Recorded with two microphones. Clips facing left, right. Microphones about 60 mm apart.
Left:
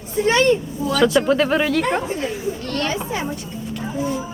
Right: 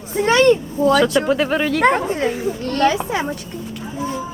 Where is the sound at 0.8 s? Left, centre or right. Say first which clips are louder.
Right 12 dB; right.